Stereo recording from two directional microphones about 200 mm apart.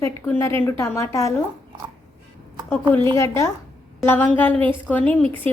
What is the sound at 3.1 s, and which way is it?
A woman's voice, 15° left (ahead or behind).